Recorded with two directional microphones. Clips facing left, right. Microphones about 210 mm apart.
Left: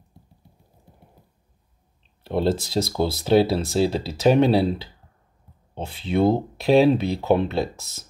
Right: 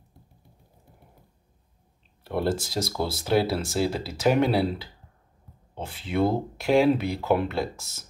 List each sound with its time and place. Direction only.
2.2 s speech: 25° left (ahead or behind)
5.8 s speech: 30° left (ahead or behind)